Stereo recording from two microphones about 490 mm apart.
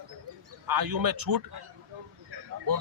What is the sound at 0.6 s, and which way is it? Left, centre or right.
Speech, right.